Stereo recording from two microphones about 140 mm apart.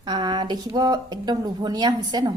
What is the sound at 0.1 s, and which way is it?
A woman's voice, 30° right (ahead or behind).